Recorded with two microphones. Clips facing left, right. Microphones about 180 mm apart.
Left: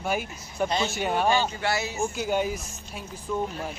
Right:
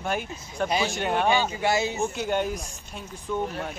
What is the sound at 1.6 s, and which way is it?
Speech, 20° right (ahead or behind).